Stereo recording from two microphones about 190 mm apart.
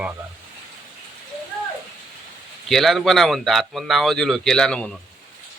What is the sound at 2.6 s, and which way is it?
Speech, centre (ahead or behind).